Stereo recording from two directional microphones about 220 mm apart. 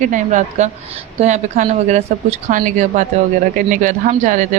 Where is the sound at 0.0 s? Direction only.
35° right (ahead or behind).